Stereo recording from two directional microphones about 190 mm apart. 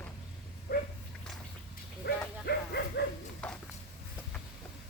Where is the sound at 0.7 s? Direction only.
55° left (ahead or behind).